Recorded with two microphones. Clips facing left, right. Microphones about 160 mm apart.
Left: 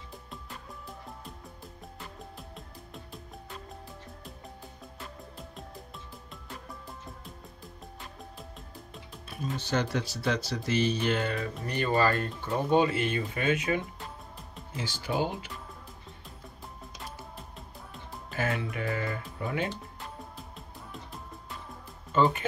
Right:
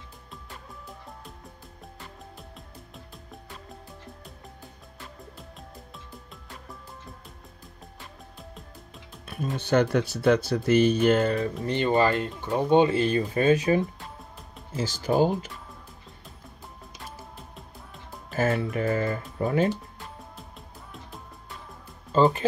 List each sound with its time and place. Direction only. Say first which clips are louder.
2.3 s music: even; centre (ahead or behind)
8.4 s music: right 1 dB; centre (ahead or behind)
9.3 s speech: right 7 dB; 55° right (ahead or behind); by 11.5 s 35° right (ahead or behind)
11.6 s speech: right 3 dB; 25° right (ahead or behind); by 15.3 s 40° right (ahead or behind)
18.3 s speech: right 7 dB; 40° right (ahead or behind)
22.1 s speech: right 4 dB; 35° right (ahead or behind)